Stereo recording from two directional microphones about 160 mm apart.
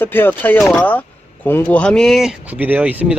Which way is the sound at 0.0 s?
10° left (ahead or behind).